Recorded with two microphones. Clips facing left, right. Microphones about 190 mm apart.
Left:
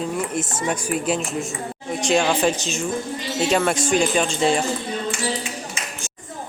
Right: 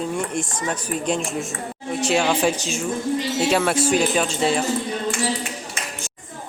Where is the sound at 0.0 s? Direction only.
Centre (ahead or behind).